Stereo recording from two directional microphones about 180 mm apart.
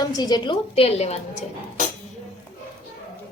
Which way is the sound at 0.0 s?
25° left (ahead or behind).